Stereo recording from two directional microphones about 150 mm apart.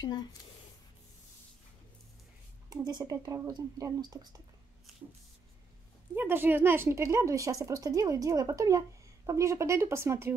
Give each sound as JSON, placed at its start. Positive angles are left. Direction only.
{"t": 0.0, "sound": "speech", "side_deg": 30}
{"t": 2.7, "sound": "a woman's voice", "side_deg": -25}
{"t": 6.1, "sound": "a woman's voice", "side_deg": -15}